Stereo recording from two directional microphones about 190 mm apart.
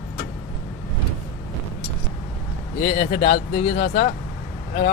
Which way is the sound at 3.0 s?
35° left (ahead or behind).